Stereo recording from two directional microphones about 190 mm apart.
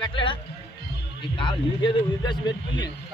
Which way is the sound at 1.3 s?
25° left (ahead or behind).